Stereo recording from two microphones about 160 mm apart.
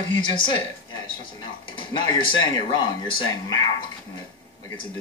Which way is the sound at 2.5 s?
30° left (ahead or behind).